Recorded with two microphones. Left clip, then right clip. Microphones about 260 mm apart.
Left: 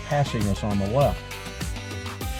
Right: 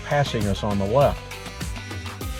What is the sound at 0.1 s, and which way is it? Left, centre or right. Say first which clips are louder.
Speech: right 3 dB; centre.